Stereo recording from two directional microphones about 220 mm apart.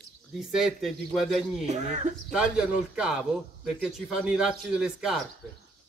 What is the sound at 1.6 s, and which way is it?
Speech, 30° right (ahead or behind).